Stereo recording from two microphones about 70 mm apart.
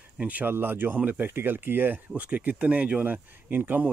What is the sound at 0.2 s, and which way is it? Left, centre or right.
Speech, right.